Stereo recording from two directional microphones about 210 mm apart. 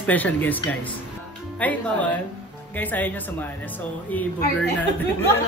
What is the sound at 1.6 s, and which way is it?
Speech, 5° left (ahead or behind).